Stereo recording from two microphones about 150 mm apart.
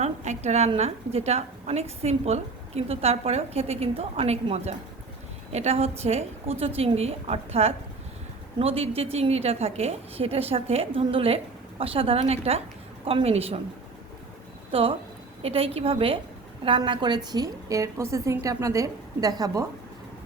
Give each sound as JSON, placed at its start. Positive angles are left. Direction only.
{"t": 0.0, "sound": "a woman's voice", "side_deg": -50}
{"t": 14.7, "sound": "a woman's voice", "side_deg": -40}